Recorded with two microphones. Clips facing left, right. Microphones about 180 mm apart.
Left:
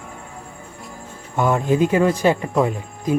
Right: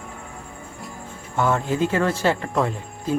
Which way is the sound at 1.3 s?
15° left (ahead or behind).